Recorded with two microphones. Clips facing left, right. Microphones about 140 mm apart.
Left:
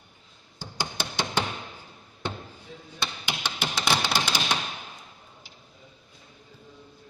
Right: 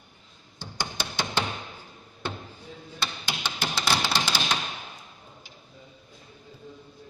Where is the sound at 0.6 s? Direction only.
15° left (ahead or behind).